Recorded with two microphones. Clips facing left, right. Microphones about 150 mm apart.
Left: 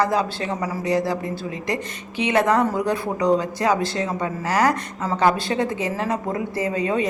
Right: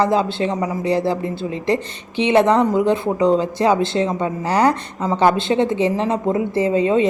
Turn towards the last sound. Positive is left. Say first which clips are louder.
# right 6 dB
turn(degrees=-25)  # may be behind; listen again after turning